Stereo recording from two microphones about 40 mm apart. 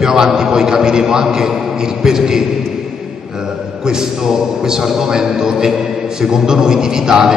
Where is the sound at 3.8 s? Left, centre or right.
Centre.